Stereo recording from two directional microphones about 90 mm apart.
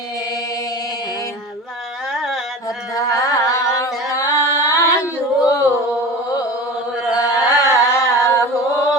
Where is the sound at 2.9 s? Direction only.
35° left (ahead or behind).